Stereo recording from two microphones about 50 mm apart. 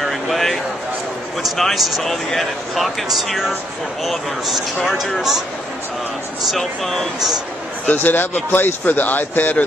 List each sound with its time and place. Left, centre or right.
0.0 s a sound: centre
1.4 s speech: centre
6.5 s speech: centre
7.8 s speech: left